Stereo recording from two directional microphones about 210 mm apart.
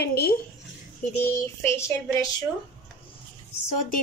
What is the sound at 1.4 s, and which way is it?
Speech, 15° left (ahead or behind).